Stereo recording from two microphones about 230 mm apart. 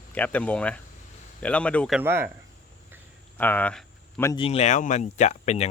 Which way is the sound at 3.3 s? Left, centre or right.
Centre.